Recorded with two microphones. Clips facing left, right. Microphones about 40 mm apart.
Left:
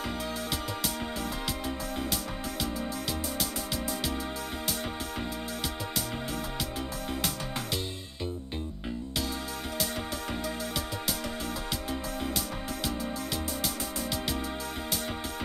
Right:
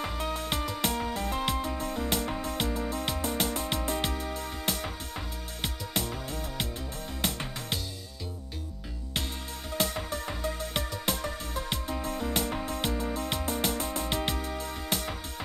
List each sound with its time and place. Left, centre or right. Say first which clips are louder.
0.2 s music: right 2 dB; right
7.2 s music: right 3 dB; right
9.8 s music: right 4 dB; right